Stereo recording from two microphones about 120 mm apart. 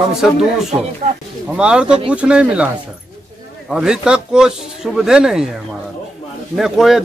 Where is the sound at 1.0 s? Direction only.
90° right.